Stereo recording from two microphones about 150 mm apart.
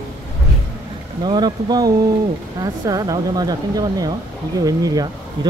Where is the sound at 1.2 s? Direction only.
30° right (ahead or behind).